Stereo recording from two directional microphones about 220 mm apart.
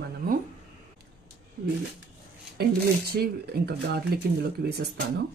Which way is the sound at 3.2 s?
45° right (ahead or behind).